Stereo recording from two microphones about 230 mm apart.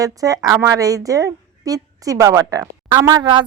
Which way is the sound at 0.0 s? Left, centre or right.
Centre.